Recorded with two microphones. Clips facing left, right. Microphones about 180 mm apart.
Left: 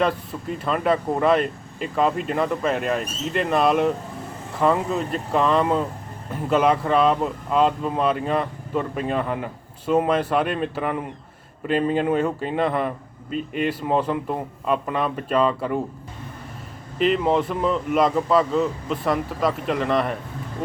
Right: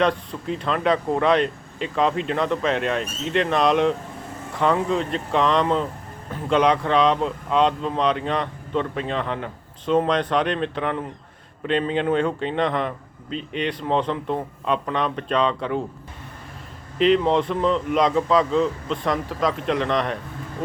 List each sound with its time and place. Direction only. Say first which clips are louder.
0.0 s speech: right 1 dB; 5° left (ahead or behind)
17.0 s speech: right 2 dB; 5° left (ahead or behind)